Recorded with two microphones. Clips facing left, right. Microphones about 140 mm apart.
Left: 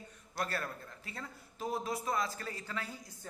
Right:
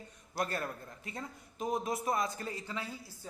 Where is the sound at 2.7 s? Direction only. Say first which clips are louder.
Right 1 dB; 10° right (ahead or behind).